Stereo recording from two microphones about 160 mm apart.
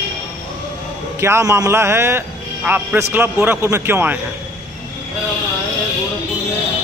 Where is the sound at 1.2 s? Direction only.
15° right (ahead or behind).